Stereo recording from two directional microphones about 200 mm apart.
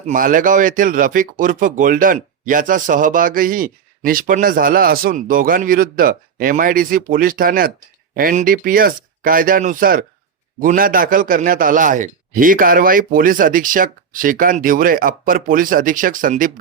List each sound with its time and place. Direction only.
0.0 s a man's voice: 40° right (ahead or behind)